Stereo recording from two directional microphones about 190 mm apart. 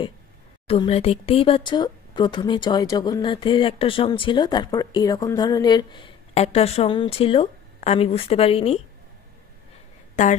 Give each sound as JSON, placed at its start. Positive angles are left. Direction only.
{"t": 0.7, "sound": "speech", "side_deg": 30}
{"t": 10.2, "sound": "a woman's voice", "side_deg": 40}